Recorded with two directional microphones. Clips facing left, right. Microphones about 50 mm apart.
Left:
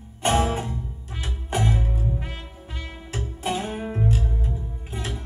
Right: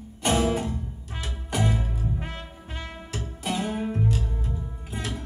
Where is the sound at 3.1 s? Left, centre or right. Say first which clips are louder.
Left 2 dB; left.